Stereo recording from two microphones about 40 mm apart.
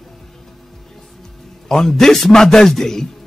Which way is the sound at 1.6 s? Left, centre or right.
Centre.